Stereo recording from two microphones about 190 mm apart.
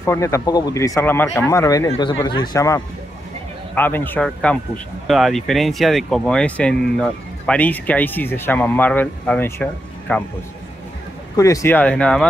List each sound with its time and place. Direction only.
0.0 s speech: 15° left (ahead or behind)
11.3 s speech: 15° left (ahead or behind)